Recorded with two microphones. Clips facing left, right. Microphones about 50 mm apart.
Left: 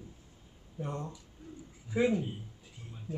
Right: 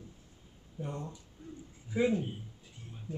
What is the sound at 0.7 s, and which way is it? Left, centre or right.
Speech, left.